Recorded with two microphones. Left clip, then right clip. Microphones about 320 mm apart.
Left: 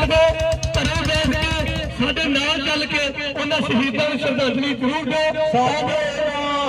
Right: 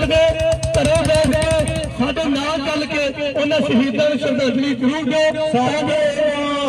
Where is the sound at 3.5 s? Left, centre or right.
Centre.